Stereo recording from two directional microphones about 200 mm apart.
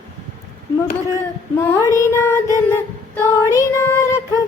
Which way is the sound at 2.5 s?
15° left (ahead or behind).